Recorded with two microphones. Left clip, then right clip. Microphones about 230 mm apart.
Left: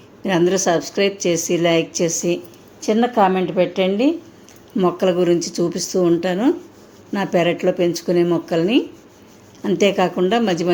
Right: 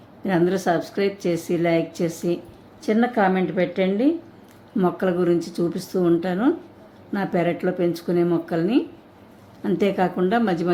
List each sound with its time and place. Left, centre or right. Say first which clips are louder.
0.2 s speech: left 4 dB; centre
3.3 s a woman's voice: left 4 dB; centre
4.8 s speech: left 5 dB; centre